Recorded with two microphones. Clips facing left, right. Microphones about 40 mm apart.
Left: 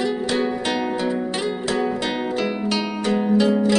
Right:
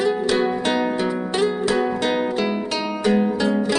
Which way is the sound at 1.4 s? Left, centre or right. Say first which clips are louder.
Right 3 dB; centre.